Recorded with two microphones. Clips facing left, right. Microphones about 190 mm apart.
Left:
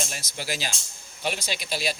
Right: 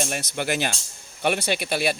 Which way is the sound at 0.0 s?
60° right (ahead or behind).